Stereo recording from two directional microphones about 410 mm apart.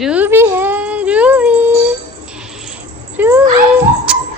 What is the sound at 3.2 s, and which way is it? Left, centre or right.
A woman's voice, centre.